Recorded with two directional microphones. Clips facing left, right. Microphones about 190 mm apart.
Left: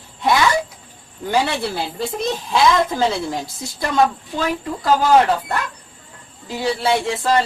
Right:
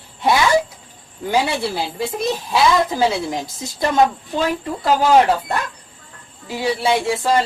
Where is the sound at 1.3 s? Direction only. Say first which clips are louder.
Right 1 dB; 10° right (ahead or behind).